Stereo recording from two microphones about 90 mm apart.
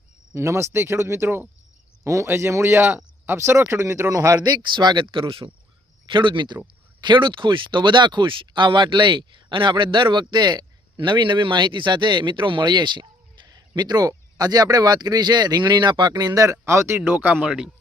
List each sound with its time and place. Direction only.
0.3 s cricket: 30° right (ahead or behind)
2.0 s speech: 30° right (ahead or behind); by 5.5 s 75° right (ahead or behind)
6.1 s speech: 60° right (ahead or behind); by 17.0 s 30° right (ahead or behind)
17.0 s cricket: 20° right (ahead or behind)